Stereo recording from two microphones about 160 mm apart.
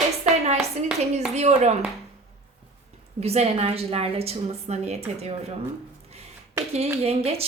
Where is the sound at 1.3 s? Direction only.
45° right (ahead or behind).